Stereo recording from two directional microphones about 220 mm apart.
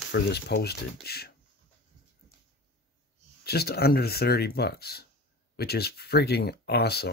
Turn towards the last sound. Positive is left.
turn(degrees=45)  # may be behind; listen again after turning